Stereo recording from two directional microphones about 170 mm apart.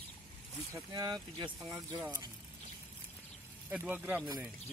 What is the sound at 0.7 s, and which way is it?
Speech, 20° right (ahead or behind).